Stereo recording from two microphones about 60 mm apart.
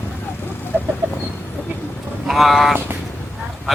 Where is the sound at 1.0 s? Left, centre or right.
Right.